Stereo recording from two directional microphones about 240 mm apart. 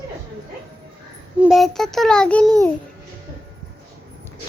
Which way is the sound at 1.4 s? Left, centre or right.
Centre.